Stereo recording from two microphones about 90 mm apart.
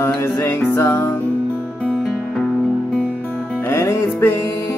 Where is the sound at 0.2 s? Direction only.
25° left (ahead or behind).